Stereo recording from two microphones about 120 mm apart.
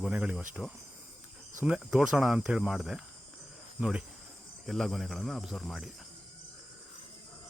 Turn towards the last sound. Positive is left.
turn(degrees=0)  # may be behind; listen again after turning